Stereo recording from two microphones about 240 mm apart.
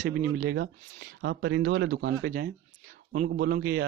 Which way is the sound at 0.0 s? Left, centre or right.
Right.